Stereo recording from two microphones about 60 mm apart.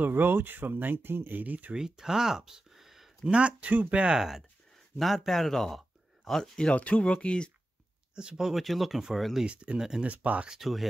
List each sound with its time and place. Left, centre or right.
0.0 s speech: right
1.7 s speech: centre
3.3 s speech: centre
4.9 s speech: centre
8.1 s speech: centre
9.5 s speech: centre
10.0 s speech: right
10.4 s speech: centre